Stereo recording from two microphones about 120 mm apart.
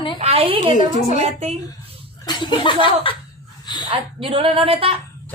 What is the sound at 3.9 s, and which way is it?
A woman's voice, 50° right (ahead or behind).